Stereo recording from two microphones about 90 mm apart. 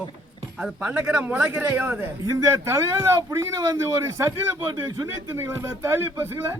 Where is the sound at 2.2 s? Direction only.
40° right (ahead or behind).